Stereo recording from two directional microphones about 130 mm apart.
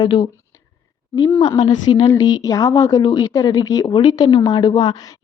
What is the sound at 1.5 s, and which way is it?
A woman's voice, 30° left (ahead or behind).